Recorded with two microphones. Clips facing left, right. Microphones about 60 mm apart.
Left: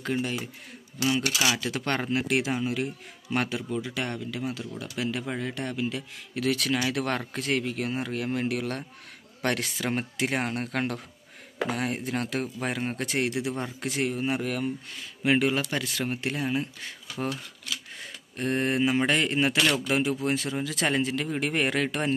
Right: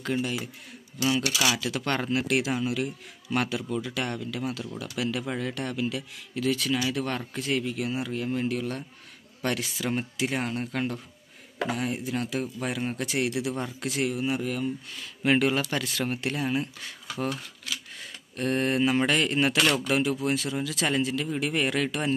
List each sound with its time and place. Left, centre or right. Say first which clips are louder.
0.0 s speech: even; left
1.5 s speech: even; left
6.3 s speech: even; left
10.1 s speech: left 1 dB; left
12.5 s speech: even; left
14.3 s speech: even; left
15.2 s speech: right 1 dB; centre
18.4 s speech: right 1 dB; left
18.8 s speech: right 1 dB; centre
19.0 s speech: even; left
19.5 s speech: right 1 dB; centre
19.9 s speech: even; left